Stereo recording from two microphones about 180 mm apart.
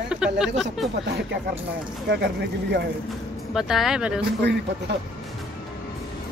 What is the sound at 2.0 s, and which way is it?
Speech, 65° right (ahead or behind).